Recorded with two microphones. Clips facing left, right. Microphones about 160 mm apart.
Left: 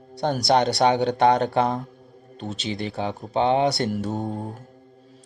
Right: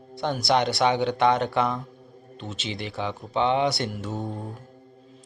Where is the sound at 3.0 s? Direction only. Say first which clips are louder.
Left 1 dB; 40° left (ahead or behind).